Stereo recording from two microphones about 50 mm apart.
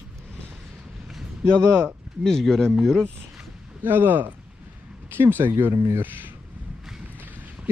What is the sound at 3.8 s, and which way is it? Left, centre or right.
Speech, right.